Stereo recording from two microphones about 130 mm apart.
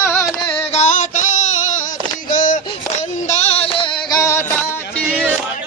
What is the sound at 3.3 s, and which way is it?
Music, 55° left (ahead or behind).